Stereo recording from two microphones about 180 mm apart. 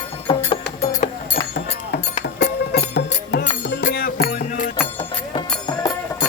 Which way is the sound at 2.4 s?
70° left (ahead or behind).